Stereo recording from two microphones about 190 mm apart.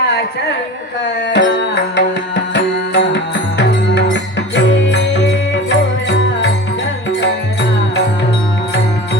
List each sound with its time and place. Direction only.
1.3 s music: 70° left (ahead or behind)